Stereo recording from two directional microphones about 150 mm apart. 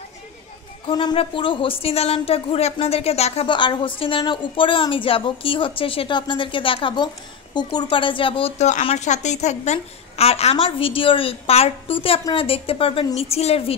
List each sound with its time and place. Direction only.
0.8 s a woman's voice: 35° left (ahead or behind)